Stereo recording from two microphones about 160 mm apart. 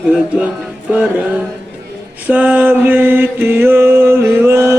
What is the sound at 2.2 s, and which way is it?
Mantra, 10° right (ahead or behind).